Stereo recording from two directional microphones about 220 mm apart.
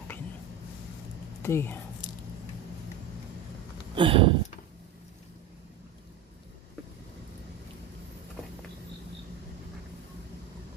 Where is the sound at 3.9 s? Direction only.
25° right (ahead or behind).